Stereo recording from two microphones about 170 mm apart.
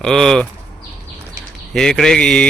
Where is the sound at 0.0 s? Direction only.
5° left (ahead or behind).